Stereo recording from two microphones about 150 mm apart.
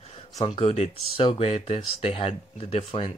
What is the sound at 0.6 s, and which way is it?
Speech, 40° left (ahead or behind).